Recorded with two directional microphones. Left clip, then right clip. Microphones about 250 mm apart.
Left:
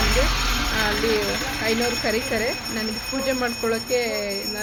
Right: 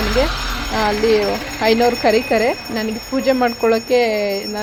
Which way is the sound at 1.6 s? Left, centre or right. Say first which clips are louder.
Right 11 dB; right.